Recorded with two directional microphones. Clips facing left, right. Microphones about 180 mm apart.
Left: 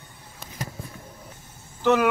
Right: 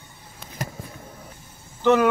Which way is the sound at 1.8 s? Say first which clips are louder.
Right 2 dB; centre (ahead or behind).